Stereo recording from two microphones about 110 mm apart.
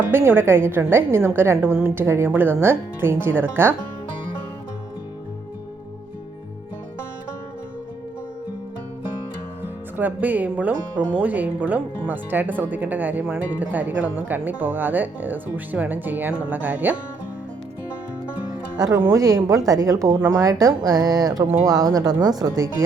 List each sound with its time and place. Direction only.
0.1 s a woman's voice: 20° right (ahead or behind)
10.0 s speech: 15° right (ahead or behind)
18.9 s a woman's voice: 25° right (ahead or behind)